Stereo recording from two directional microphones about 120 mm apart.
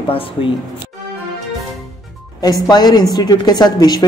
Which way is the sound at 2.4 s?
35° left (ahead or behind).